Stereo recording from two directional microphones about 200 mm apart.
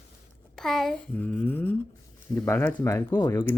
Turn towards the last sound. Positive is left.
turn(degrees=15)  # may be behind; listen again after turning